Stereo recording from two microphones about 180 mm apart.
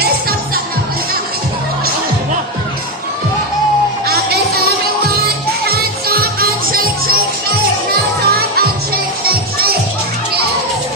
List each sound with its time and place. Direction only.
4.1 s music: 60° right (ahead or behind)